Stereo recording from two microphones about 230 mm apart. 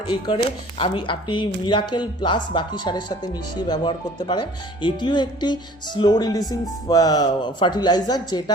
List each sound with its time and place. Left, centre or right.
0.8 s speech: left